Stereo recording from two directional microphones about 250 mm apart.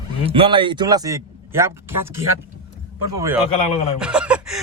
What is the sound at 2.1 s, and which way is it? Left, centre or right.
Speech, right.